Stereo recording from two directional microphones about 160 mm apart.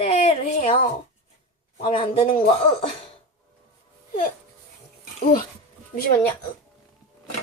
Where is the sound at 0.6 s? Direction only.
40° left (ahead or behind).